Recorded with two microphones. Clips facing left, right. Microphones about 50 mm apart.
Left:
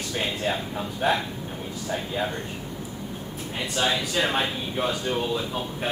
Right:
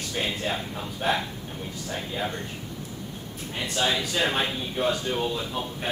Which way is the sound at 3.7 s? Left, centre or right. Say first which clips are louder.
Left 1 dB; centre.